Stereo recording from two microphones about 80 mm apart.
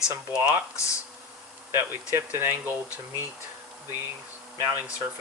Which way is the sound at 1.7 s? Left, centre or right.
Right.